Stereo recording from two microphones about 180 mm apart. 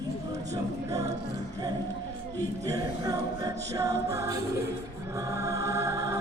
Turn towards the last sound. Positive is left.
turn(degrees=-15)  # may be behind; listen again after turning